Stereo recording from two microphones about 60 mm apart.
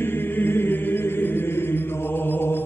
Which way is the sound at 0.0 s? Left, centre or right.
Left.